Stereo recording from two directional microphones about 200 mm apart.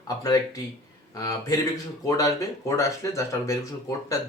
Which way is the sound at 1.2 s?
15° left (ahead or behind).